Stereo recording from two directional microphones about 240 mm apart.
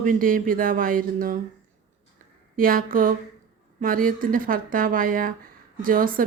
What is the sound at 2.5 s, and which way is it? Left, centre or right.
Speech, right.